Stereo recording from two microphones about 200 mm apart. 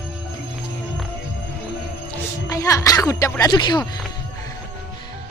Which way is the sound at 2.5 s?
15° left (ahead or behind).